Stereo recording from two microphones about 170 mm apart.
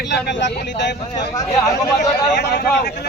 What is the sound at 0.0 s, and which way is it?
Speech, 90° left.